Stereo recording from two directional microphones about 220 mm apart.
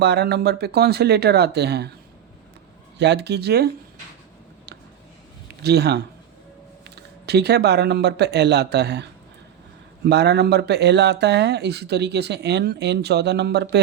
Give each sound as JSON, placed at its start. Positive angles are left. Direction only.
{"t": 0.0, "sound": "speech", "side_deg": -50}
{"t": 3.0, "sound": "speech", "side_deg": -50}
{"t": 5.6, "sound": "speech", "side_deg": -50}